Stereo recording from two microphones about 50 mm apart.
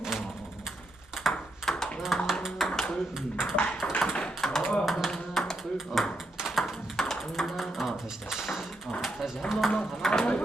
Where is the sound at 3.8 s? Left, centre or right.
Left.